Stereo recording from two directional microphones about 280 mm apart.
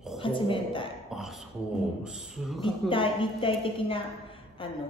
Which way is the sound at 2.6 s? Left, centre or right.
Centre.